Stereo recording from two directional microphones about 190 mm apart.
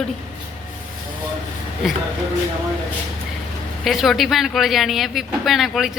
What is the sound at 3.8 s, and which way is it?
Speech, centre (ahead or behind).